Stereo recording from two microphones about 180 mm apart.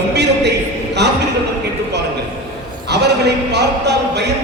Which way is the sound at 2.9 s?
70° right (ahead or behind).